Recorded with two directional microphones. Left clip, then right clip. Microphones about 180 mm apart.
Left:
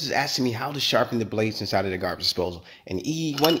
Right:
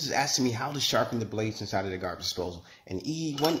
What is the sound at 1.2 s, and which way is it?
Speech, 45° left (ahead or behind).